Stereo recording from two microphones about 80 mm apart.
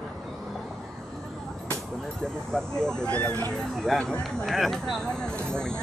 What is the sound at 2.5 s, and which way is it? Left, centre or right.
Speech, centre.